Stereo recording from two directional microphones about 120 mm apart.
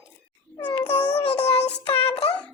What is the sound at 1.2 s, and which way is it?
Child singing, 55° left (ahead or behind).